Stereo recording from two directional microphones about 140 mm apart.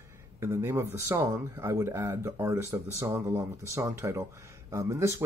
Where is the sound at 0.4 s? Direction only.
15° right (ahead or behind).